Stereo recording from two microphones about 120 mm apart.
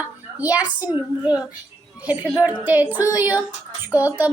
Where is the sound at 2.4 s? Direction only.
10° right (ahead or behind).